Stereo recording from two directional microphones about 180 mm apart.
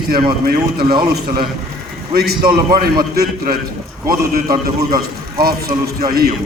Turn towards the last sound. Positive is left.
turn(degrees=-55)  # may be behind; listen again after turning